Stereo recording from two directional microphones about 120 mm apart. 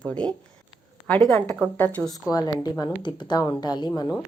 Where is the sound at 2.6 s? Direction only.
35° left (ahead or behind).